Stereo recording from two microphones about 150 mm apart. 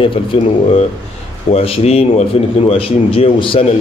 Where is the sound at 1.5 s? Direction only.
40° left (ahead or behind).